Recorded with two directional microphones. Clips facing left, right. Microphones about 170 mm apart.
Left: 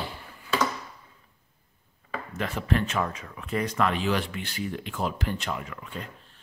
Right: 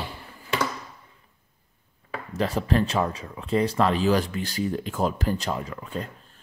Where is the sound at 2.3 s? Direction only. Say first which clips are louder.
Right 4 dB; 35° right (ahead or behind).